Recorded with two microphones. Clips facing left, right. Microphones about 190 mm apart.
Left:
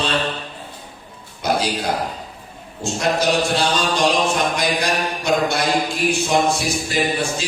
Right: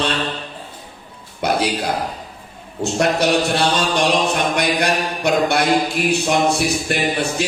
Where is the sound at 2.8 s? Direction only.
65° right (ahead or behind).